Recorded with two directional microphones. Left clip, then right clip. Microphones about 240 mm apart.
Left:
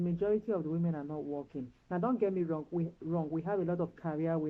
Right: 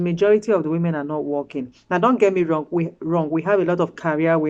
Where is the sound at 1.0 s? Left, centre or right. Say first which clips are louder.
Right 15 dB; right.